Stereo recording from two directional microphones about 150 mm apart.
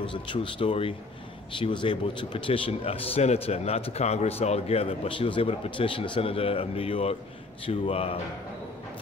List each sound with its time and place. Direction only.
0.0 s a man's voice: 35° left (ahead or behind)